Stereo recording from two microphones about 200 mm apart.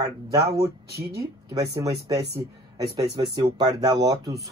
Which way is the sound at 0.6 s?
50° right (ahead or behind).